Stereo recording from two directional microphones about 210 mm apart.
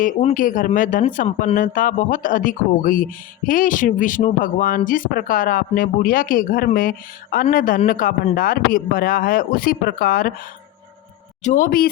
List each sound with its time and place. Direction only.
0.0 s speech: 35° left (ahead or behind)
11.4 s speech: 40° left (ahead or behind)